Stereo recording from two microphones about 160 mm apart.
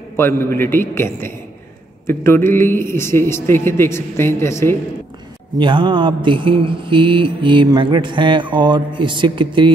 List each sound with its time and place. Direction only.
0.1 s a man's voice: 15° left (ahead or behind)
5.6 s mantra: 30° right (ahead or behind)